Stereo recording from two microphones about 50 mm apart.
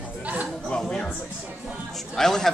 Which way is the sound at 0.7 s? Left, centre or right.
Centre.